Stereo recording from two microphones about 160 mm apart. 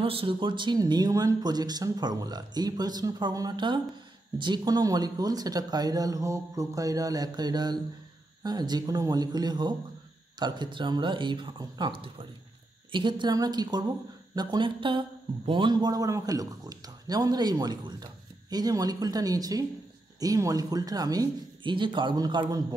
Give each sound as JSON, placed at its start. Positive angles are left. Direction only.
{"t": 0.0, "sound": "a man's voice", "side_deg": -35}